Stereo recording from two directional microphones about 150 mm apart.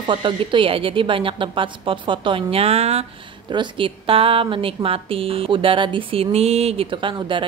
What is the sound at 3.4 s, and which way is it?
A woman's voice, 30° right (ahead or behind).